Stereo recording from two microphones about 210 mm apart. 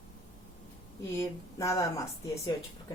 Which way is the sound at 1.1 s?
15° left (ahead or behind).